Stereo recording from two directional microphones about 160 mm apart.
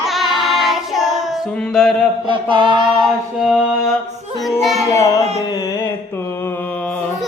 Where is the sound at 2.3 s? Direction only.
30° right (ahead or behind).